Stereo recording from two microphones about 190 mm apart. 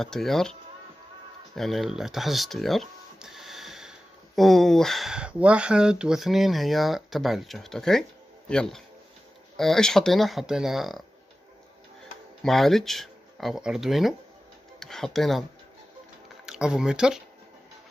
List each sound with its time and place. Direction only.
0.0 s speech: centre (ahead or behind)
12.4 s speech: centre (ahead or behind)
16.4 s speech: 5° right (ahead or behind)